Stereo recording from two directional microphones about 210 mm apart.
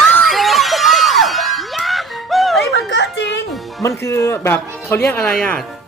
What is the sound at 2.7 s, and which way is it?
Music, 55° left (ahead or behind).